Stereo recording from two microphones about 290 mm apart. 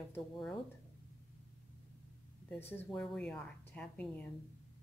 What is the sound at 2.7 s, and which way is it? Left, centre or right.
A woman's voice, centre.